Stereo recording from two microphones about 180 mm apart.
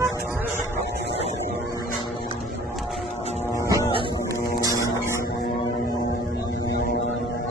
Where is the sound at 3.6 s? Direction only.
20° right (ahead or behind).